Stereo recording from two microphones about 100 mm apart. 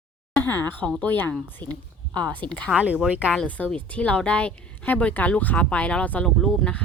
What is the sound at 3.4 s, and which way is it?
Speech, 15° left (ahead or behind).